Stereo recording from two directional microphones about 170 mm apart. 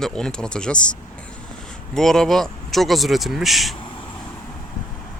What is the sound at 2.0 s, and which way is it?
Speech, 5° left (ahead or behind).